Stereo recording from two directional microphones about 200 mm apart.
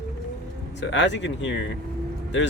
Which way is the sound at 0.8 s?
65° left (ahead or behind).